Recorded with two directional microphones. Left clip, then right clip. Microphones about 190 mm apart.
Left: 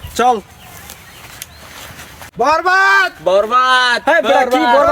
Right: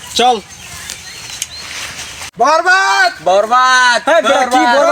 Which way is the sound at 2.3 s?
20° left (ahead or behind).